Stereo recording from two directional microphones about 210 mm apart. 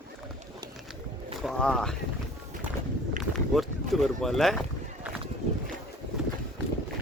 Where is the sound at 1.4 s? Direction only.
Centre (ahead or behind).